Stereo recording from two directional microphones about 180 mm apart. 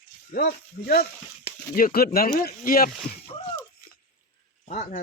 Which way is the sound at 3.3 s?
30° left (ahead or behind).